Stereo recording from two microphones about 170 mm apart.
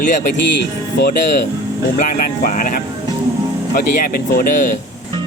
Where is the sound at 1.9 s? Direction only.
55° left (ahead or behind).